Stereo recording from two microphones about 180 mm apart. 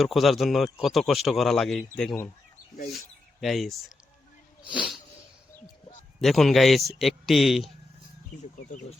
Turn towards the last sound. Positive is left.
turn(degrees=0)  # may be behind; listen again after turning